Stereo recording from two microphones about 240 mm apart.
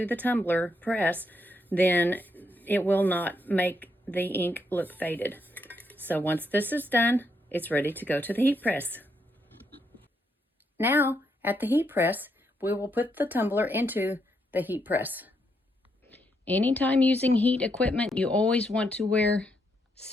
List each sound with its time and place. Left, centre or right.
0.0 s speech: centre
4.7 s dishes: centre
6.5 s speech: centre
10.8 s speech: centre
16.0 s speech: centre